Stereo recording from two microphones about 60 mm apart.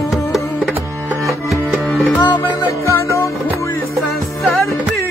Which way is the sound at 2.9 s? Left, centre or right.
Left.